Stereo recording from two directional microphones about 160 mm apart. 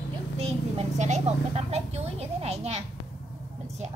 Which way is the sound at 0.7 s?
45° right (ahead or behind).